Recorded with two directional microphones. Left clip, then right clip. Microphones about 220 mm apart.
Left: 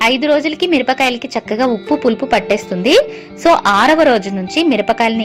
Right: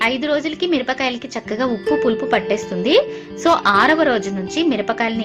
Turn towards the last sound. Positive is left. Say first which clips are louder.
# left 6 dB
turn(degrees=25)  # may be behind; listen again after turning